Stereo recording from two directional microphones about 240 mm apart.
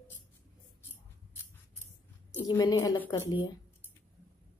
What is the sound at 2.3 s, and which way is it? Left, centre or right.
Speech, centre.